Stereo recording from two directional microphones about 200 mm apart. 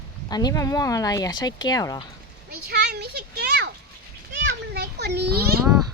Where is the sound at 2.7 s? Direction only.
55° right (ahead or behind).